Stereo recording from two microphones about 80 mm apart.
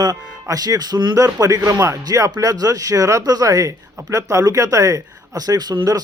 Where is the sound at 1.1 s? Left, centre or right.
Right.